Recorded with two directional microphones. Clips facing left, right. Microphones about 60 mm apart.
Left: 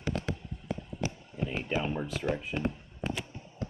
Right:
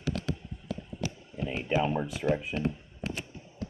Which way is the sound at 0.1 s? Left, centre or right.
Left.